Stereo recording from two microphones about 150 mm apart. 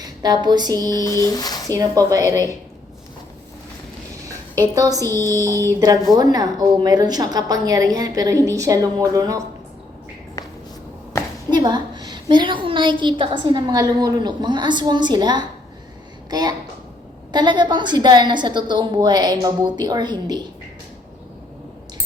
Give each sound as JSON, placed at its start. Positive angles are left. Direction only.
{"t": 0.0, "sound": "speech", "side_deg": -25}
{"t": 1.0, "sound": "a sound", "side_deg": 20}
{"t": 1.7, "sound": "a woman's voice", "side_deg": -25}
{"t": 4.7, "sound": "a woman's voice", "side_deg": -25}
{"t": 11.5, "sound": "a woman's voice", "side_deg": -25}